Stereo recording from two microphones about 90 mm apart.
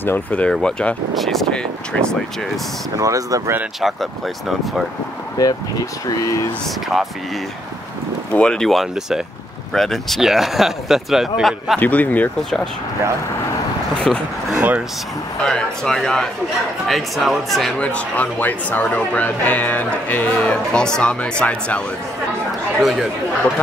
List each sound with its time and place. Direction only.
0.0 s speech: 20° left (ahead or behind)
3.0 s speech: 40° right (ahead or behind)
3.8 s speech: centre (ahead or behind)
5.4 s speech: 40° left (ahead or behind)
8.3 s speech: 10° left (ahead or behind)
11.8 s speech: 20° left (ahead or behind)
14.1 s speech: 5° left (ahead or behind)
14.5 s a sound: 15° right (ahead or behind)
15.4 s speech: 5° left (ahead or behind)
22.8 s speech: centre (ahead or behind)